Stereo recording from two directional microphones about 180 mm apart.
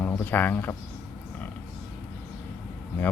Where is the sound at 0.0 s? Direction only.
10° left (ahead or behind).